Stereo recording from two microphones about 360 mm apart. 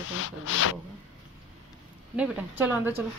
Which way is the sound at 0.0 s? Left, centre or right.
Left.